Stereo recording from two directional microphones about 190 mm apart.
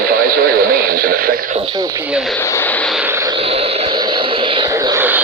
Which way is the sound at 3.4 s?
30° right (ahead or behind).